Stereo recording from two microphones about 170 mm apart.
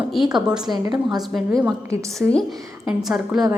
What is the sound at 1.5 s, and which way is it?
A woman's voice, 15° right (ahead or behind).